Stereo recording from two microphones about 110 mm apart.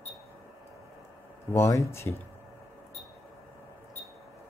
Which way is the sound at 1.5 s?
25° left (ahead or behind).